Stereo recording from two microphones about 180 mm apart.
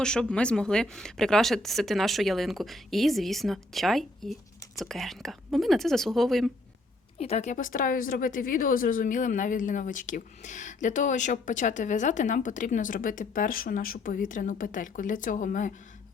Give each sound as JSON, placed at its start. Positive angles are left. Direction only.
{"t": 0.0, "sound": "speech", "side_deg": 5}
{"t": 7.2, "sound": "a woman's voice", "side_deg": 35}